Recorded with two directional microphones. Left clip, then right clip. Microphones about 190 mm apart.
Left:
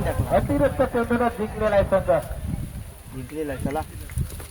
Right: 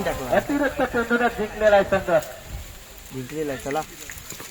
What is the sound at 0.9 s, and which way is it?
A man's voice, 60° left (ahead or behind).